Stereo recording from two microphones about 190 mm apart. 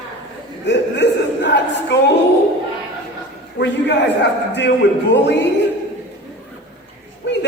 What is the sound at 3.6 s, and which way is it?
A man's voice, 65° left (ahead or behind).